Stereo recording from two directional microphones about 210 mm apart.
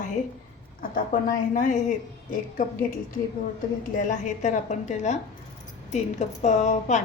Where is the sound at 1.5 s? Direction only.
35° left (ahead or behind).